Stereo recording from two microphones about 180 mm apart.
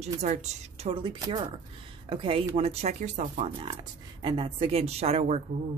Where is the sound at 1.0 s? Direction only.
25° right (ahead or behind); by 3.4 s 45° right (ahead or behind).